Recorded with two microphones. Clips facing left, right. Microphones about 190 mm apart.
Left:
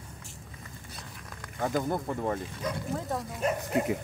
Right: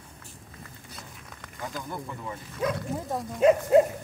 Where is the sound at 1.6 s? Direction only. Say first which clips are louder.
Left 7 dB; 50° left (ahead or behind).